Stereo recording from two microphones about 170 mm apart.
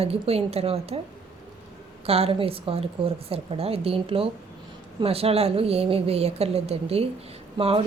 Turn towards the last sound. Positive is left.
turn(degrees=-35)  # may be behind; listen again after turning